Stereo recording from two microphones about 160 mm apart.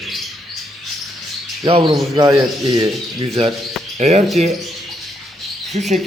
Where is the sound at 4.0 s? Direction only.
45° right (ahead or behind).